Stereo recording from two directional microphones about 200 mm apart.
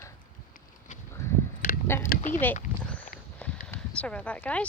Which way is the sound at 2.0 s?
40° left (ahead or behind).